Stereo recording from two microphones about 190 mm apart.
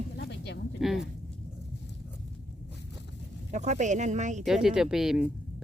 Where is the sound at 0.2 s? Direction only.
65° left (ahead or behind).